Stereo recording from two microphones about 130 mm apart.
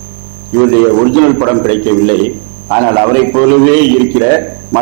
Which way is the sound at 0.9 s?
20° right (ahead or behind).